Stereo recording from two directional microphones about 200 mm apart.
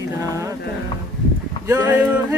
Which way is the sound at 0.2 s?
15° right (ahead or behind).